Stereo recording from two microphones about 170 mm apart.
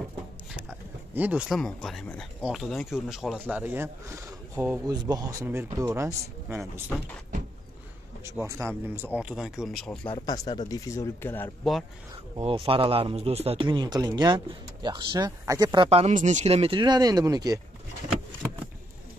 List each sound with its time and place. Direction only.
0.6 s a sound: 10° right (ahead or behind)
1.6 s speech: 5° left (ahead or behind); by 6.6 s 15° right (ahead or behind)
8.3 s speech: 15° right (ahead or behind); by 9.9 s centre (ahead or behind)
10.0 s speech: 25° left (ahead or behind)
12.4 s speech: 30° right (ahead or behind)